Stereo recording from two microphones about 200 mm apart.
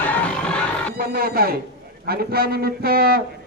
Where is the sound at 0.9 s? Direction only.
50° right (ahead or behind).